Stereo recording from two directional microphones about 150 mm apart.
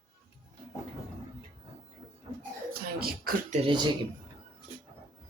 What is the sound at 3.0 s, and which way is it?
Speech, 90° right.